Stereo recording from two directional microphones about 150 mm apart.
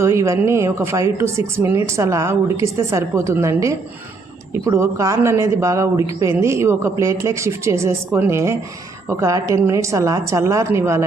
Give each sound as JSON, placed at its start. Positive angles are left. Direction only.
{"t": 0.0, "sound": "speech", "side_deg": -20}